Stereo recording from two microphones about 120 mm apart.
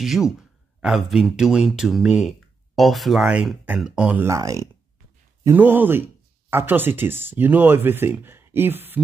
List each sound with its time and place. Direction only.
0.0 s speech: 5° right (ahead or behind)